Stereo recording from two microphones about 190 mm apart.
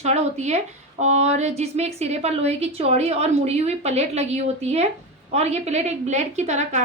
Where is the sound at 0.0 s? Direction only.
35° right (ahead or behind).